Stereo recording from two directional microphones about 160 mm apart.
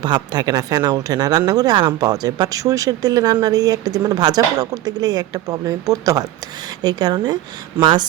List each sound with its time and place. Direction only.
0.0 s speech: 25° right (ahead or behind)